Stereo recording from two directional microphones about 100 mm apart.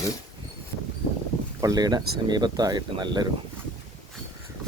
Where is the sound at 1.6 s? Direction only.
40° right (ahead or behind).